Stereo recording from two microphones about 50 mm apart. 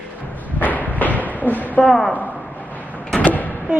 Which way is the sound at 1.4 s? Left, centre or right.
Left.